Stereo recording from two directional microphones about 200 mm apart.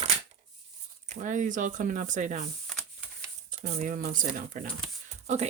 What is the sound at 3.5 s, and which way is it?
Speech, 35° right (ahead or behind).